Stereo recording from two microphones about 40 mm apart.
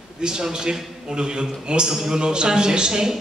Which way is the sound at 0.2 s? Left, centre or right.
Centre.